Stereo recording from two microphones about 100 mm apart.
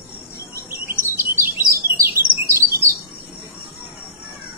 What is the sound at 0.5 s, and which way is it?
Chirp, 25° right (ahead or behind).